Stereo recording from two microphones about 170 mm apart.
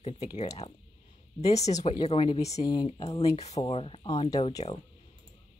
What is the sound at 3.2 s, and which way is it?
Speech, 40° left (ahead or behind).